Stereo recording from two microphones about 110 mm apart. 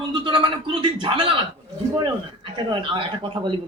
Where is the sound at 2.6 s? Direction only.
50° right (ahead or behind).